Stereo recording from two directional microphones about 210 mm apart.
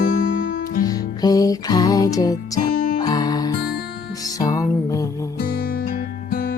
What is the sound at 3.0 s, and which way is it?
Music, 20° left (ahead or behind).